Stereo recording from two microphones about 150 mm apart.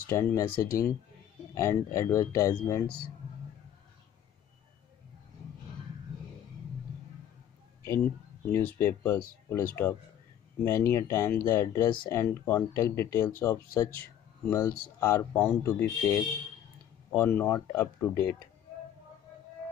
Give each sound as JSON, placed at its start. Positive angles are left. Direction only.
{"t": 0.1, "sound": "speech", "side_deg": 20}
{"t": 8.4, "sound": "speech", "side_deg": 15}
{"t": 17.2, "sound": "speech", "side_deg": 5}